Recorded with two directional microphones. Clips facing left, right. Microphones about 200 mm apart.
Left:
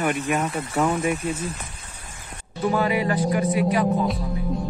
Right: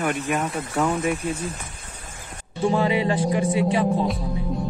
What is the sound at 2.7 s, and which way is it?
Speech, 25° right (ahead or behind).